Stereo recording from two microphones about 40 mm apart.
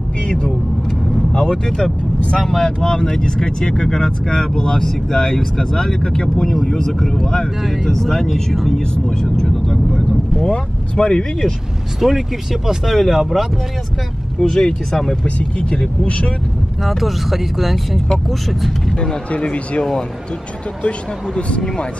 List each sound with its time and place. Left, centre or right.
0.3 s speech: centre
2.1 s speech: left
2.4 s speech: centre
7.6 s speech: centre
9.5 s speech: centre
10.5 s speech: left
12.0 s speech: centre
14.4 s speech: centre
15.2 s speech: centre
16.8 s speech: centre
19.3 s speech: left
19.8 s speech: centre
21.4 s speech: left